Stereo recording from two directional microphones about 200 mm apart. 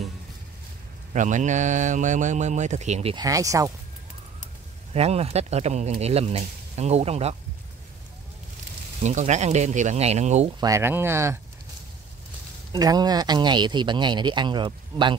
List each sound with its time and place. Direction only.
1.1 s speech: 40° right (ahead or behind)
3.3 s speech: 15° right (ahead or behind)
4.9 s speech: 30° right (ahead or behind)
9.0 s speech: 35° right (ahead or behind)
10.6 s speech: 15° right (ahead or behind)
12.7 s speech: 20° right (ahead or behind)